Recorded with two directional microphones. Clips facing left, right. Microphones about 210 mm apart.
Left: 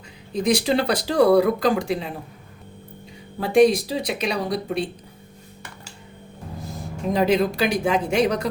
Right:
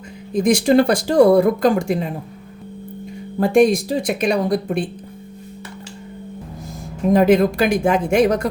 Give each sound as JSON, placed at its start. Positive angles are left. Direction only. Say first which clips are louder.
{"t": 0.3, "sound": "speech", "louder": "right 6 dB", "side_deg": -50}
{"t": 3.4, "sound": "speech", "louder": "right 2 dB", "side_deg": -50}
{"t": 7.1, "sound": "speech", "louder": "right 6 dB", "side_deg": -50}